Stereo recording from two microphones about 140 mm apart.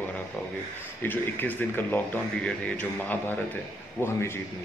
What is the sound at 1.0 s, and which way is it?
Speech, 15° left (ahead or behind).